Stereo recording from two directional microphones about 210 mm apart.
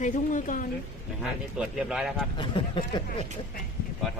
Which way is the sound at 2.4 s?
25° left (ahead or behind).